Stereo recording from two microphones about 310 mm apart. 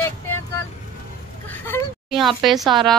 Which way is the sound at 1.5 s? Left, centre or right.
Centre.